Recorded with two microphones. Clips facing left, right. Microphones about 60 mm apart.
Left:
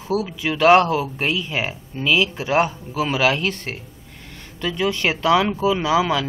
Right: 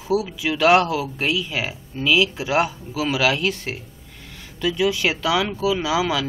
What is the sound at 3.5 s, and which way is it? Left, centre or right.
Speech, centre.